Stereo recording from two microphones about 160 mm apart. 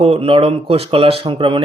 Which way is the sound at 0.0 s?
35° right (ahead or behind).